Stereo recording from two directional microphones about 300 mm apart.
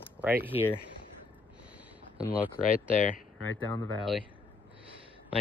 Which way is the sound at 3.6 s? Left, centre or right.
Centre.